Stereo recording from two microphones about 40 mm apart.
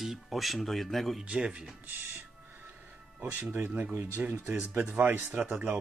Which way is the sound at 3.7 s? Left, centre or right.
Right.